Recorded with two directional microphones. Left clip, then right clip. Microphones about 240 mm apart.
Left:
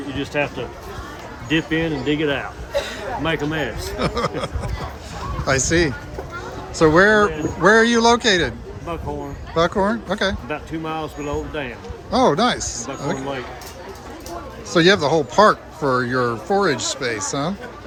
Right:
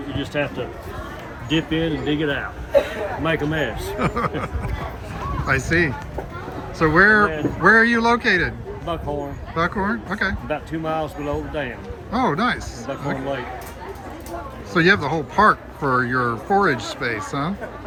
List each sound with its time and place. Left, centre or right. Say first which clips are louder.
1.5 s speech: left 1 dB; left
3.2 s speech: even; centre
14.7 s speech: left 2 dB; centre